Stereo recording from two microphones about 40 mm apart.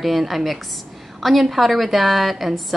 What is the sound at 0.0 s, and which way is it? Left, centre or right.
A woman's voice, centre.